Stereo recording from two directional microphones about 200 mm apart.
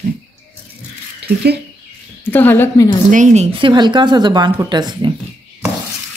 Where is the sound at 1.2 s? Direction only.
55° right (ahead or behind).